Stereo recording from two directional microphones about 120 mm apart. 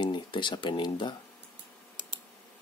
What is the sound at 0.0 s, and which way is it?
Speech, 40° left (ahead or behind).